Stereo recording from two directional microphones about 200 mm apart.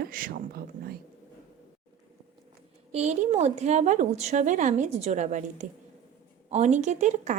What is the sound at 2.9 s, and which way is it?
A woman's voice, 35° right (ahead or behind).